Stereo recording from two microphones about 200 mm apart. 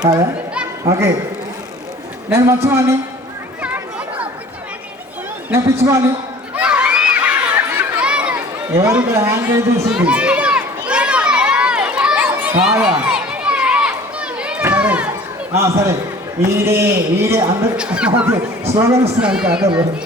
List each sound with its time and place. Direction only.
0.9 s speech: 15° right (ahead or behind)
2.3 s speech: 15° right (ahead or behind)
5.5 s speech: 15° right (ahead or behind)
6.6 s crowd: 5° right (ahead or behind)
9.9 s a sound: 5° right (ahead or behind)
15.5 s speech: 15° right (ahead or behind)
19.2 s speech: 5° right (ahead or behind)